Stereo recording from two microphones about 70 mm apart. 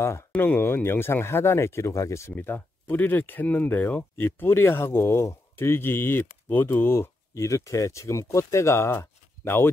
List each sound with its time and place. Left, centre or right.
0.4 s speech: left
2.3 s speech: left